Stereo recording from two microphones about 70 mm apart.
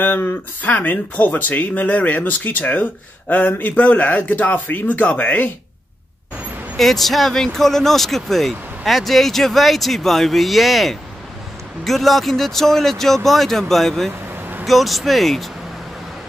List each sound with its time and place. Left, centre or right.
0.0 s speech: left
6.8 s speech: centre